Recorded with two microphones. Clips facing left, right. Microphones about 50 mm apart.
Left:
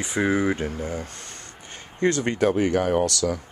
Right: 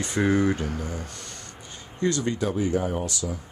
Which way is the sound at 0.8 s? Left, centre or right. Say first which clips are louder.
Left 3 dB; left.